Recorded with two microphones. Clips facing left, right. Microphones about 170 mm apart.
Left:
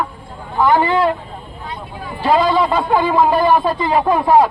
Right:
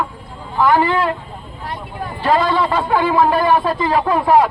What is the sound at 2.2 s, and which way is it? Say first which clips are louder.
Speech: left 2 dB; 15° left (ahead or behind).